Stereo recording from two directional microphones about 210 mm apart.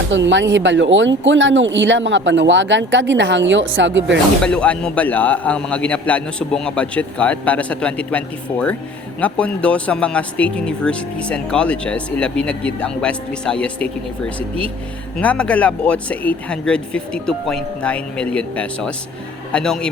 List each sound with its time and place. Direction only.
0.1 s speech: 60° right (ahead or behind)
4.4 s a man's voice: 5° left (ahead or behind)
15.2 s speech: 5° left (ahead or behind)